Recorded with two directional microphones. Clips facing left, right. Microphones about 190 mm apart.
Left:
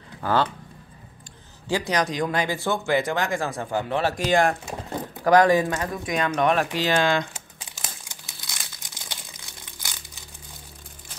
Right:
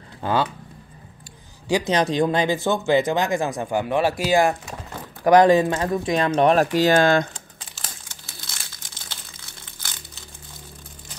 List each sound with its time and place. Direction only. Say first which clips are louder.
0.2 s speech: even; 15° right (ahead or behind)
1.7 s a man's voice: right 4 dB; 15° right (ahead or behind)
2.0 s speech: right 5 dB; 25° right (ahead or behind); by 4.6 s 5° right (ahead or behind)
5.2 s speech: right 3 dB; 20° right (ahead or behind); by 7.2 s 45° right (ahead or behind)
7.3 s crumpling: even; 15° left (ahead or behind)